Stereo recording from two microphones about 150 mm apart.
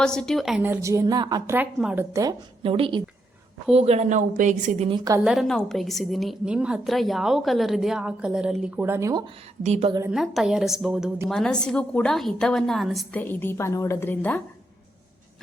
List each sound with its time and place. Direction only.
0.0 s a woman's voice: 5° left (ahead or behind)
0.6 s a woman's voice: 15° right (ahead or behind)
1.5 s speech: 10° right (ahead or behind)
2.6 s a woman's voice: 35° right (ahead or behind); by 4.9 s 55° right (ahead or behind)
5.2 s a woman's voice: centre (ahead or behind); by 9.2 s 20° right (ahead or behind)
9.6 s speech: 50° right (ahead or behind)
10.1 s a woman's voice: 5° right (ahead or behind)
13.1 s a woman's voice: 15° left (ahead or behind)